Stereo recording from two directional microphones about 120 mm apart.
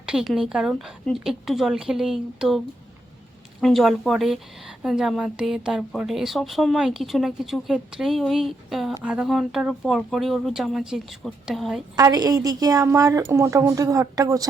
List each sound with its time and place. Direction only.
0.0 s a woman's voice: 5° right (ahead or behind)
3.6 s a woman's voice: centre (ahead or behind)
11.9 s a woman's voice: 30° right (ahead or behind)